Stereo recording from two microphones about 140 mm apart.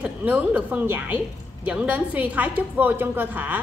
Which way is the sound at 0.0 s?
10° right (ahead or behind).